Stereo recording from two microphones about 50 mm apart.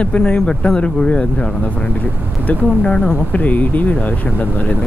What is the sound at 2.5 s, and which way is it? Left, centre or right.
Speech, left.